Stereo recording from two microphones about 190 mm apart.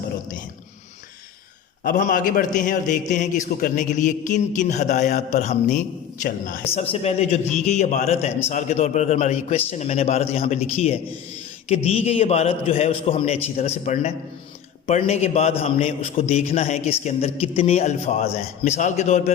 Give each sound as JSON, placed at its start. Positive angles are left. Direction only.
{"t": 1.8, "sound": "a man's voice", "side_deg": 45}
{"t": 6.7, "sound": "a man's voice", "side_deg": 35}